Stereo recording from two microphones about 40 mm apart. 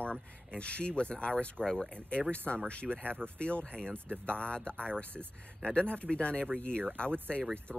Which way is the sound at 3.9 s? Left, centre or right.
Right.